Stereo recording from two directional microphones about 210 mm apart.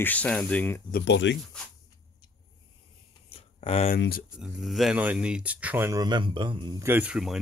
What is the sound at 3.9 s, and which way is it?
Speech, 50° left (ahead or behind).